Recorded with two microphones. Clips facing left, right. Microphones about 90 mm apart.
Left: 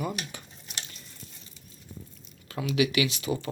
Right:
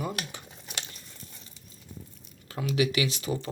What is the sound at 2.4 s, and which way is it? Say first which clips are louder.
Speech: left 1 dB; 30° right (ahead or behind).